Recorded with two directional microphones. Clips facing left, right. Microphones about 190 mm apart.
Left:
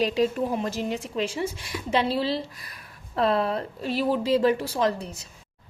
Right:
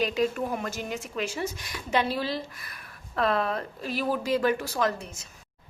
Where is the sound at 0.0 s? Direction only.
35° left (ahead or behind).